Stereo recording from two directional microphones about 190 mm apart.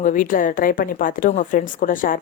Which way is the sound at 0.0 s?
45° left (ahead or behind).